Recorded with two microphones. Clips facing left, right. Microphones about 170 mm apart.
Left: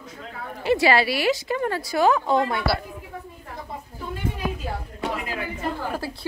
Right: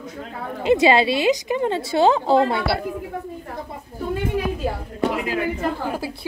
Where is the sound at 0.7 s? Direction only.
20° right (ahead or behind).